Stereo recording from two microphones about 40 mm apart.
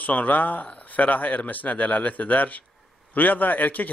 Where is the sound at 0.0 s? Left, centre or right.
Left.